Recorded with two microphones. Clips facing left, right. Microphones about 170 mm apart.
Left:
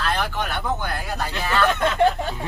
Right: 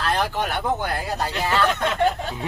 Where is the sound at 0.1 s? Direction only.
35° right (ahead or behind).